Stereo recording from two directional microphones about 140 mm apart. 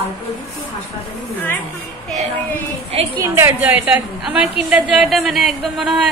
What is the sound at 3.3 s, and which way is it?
Speech, 15° right (ahead or behind).